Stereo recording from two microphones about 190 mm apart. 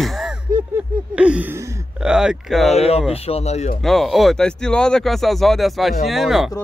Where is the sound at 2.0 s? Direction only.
5° right (ahead or behind).